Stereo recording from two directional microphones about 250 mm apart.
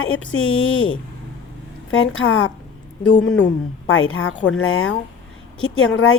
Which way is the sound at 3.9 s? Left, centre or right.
Left.